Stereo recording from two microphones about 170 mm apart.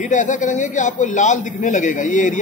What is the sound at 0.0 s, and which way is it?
A man's voice, 45° left (ahead or behind).